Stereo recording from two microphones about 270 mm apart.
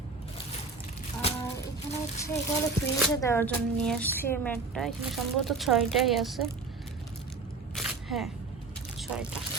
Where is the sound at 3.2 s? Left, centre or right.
Centre.